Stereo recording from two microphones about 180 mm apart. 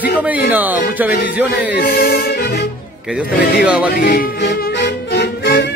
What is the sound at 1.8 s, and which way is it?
Speech, 55° left (ahead or behind).